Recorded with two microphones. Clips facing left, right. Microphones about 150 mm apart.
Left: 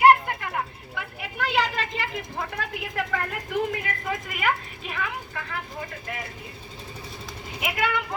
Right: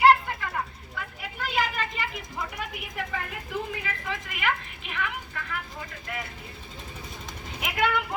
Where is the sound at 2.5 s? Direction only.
90° left.